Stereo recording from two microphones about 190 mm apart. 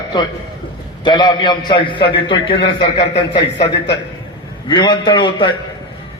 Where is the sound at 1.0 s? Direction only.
25° left (ahead or behind).